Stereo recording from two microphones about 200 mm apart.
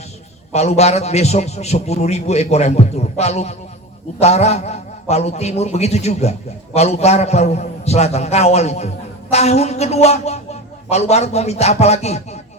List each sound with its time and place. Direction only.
0.5 s a woman's voice: 35° left (ahead or behind)